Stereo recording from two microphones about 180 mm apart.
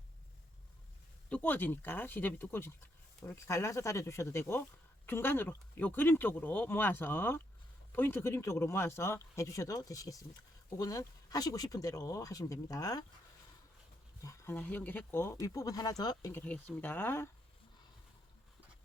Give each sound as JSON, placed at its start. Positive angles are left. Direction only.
{"t": 1.3, "sound": "speech", "side_deg": 10}
{"t": 14.2, "sound": "speech", "side_deg": 15}
{"t": 16.4, "sound": "speech", "side_deg": 10}